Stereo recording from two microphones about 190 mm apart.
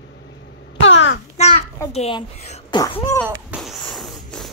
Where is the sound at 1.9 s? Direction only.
35° left (ahead or behind).